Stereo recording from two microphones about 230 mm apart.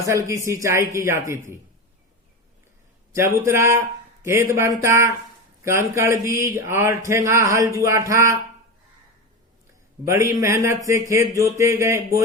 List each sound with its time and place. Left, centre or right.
0.0 s speech: centre
3.1 s speech: centre
10.1 s speech: centre